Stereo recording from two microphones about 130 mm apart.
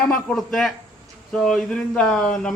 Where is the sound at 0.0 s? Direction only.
5° left (ahead or behind).